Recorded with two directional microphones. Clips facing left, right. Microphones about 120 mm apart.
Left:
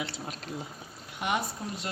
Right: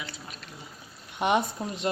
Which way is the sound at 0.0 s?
80° left.